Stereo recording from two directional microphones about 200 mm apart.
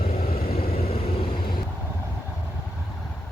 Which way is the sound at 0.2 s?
45° left (ahead or behind).